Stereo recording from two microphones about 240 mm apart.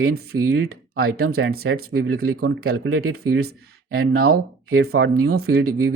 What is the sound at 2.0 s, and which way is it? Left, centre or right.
Speech, right.